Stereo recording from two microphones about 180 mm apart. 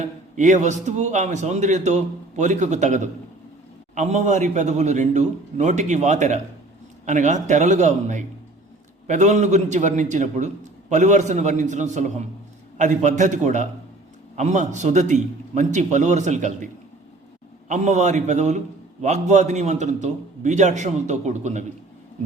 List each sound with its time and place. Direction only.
0.0 s a man's voice: 40° right (ahead or behind)
17.7 s a man's voice: 40° right (ahead or behind)